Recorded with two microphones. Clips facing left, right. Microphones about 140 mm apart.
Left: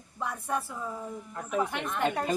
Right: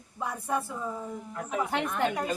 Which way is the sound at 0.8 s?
Centre (ahead or behind).